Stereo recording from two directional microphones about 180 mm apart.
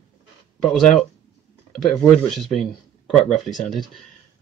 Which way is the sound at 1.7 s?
Centre (ahead or behind).